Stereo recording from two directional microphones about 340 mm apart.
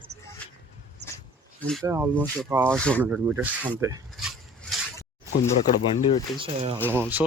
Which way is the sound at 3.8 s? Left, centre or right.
Centre.